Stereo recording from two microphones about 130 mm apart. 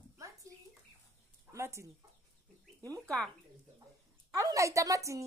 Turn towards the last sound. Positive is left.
turn(degrees=-25)  # may be behind; listen again after turning